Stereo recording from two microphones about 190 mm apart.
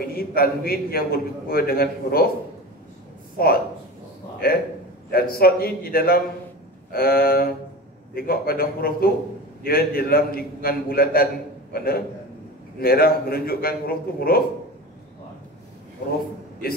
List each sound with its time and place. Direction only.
0.0 s a man's voice: 50° left (ahead or behind)
3.4 s a man's voice: 55° left (ahead or behind)